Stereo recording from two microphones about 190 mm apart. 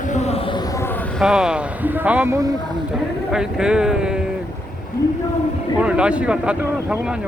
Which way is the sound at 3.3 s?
5° right (ahead or behind).